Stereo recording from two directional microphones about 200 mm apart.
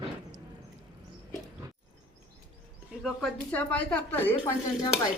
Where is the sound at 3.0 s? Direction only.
5° left (ahead or behind).